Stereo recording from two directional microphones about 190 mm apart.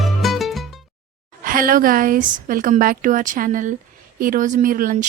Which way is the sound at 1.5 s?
45° right (ahead or behind).